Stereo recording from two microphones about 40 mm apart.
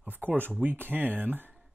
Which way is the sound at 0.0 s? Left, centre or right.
Right.